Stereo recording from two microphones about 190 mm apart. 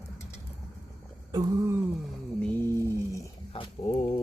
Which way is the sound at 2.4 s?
10° left (ahead or behind).